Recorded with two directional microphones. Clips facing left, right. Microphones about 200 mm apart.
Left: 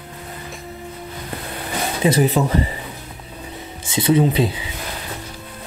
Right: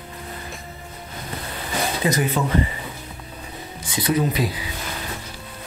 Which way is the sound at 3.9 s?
25° left (ahead or behind).